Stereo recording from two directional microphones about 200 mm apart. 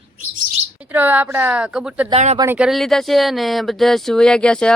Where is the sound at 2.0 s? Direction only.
30° right (ahead or behind).